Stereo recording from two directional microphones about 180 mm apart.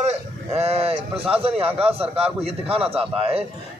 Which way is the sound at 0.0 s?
35° right (ahead or behind).